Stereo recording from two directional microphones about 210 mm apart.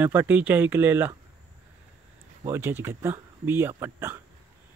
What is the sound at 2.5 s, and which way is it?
Speech, 10° right (ahead or behind).